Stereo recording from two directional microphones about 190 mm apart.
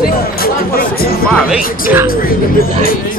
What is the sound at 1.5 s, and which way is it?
Music, 10° right (ahead or behind).